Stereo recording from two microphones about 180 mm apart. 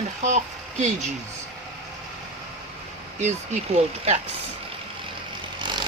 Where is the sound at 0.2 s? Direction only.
40° right (ahead or behind).